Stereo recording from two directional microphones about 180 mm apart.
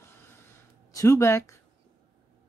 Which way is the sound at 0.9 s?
20° left (ahead or behind).